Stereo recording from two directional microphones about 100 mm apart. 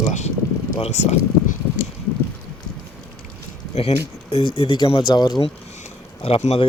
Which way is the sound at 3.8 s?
80° left.